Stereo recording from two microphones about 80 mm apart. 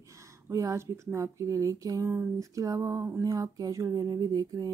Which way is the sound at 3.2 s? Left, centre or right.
Right.